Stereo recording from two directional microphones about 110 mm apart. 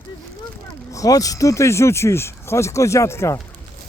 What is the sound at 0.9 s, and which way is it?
Speech, 30° left (ahead or behind).